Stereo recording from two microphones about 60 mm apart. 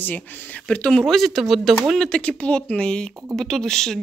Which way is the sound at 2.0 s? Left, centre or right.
Centre.